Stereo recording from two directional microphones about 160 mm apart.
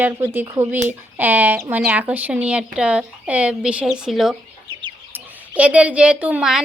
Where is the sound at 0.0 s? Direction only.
15° right (ahead or behind).